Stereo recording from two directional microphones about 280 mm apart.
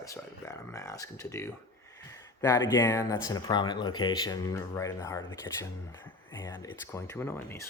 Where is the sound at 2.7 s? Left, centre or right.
Centre.